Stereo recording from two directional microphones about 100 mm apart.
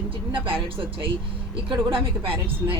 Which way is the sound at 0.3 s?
60° right (ahead or behind).